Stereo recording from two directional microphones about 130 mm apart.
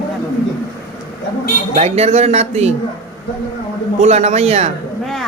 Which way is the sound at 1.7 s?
55° right (ahead or behind).